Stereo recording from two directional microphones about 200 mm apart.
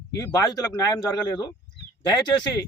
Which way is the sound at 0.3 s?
20° left (ahead or behind).